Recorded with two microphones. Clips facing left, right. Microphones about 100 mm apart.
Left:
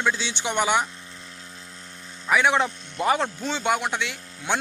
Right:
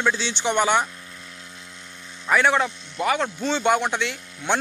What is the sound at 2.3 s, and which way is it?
Speech, 5° left (ahead or behind).